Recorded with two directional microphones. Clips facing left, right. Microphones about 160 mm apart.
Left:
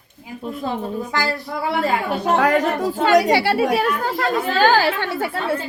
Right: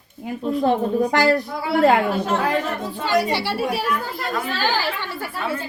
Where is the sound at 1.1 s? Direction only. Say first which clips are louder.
Right 5 dB; 65° right (ahead or behind).